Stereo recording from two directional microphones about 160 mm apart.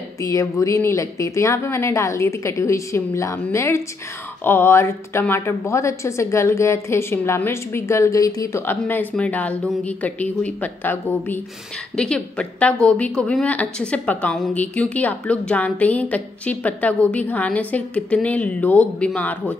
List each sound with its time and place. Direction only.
0.2 s a woman's voice: 20° left (ahead or behind)